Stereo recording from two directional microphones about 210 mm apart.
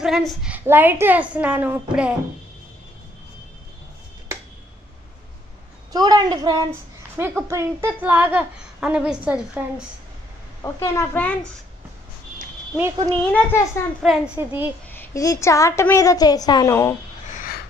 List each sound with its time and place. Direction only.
0.0 s a woman's voice: centre (ahead or behind)
5.9 s a woman's voice: 20° right (ahead or behind)
10.6 s a woman's voice: 15° left (ahead or behind)
13.3 s a woman's voice: 10° left (ahead or behind)
14.0 s a woman's voice: 5° right (ahead or behind)
14.9 s a woman's voice: 10° left (ahead or behind)
17.3 s a sound: 40° left (ahead or behind)